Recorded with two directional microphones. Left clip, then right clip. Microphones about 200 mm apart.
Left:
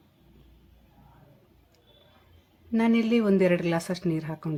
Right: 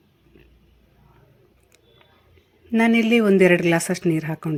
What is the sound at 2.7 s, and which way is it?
Speech, 20° right (ahead or behind).